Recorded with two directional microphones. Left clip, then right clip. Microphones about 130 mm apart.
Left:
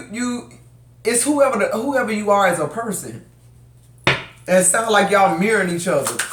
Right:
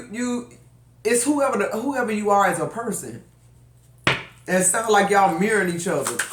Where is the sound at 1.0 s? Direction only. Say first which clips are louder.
Left 4 dB; 20° left (ahead or behind).